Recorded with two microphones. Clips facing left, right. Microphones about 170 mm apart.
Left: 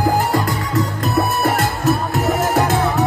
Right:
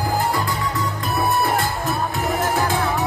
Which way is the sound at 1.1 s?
80° left.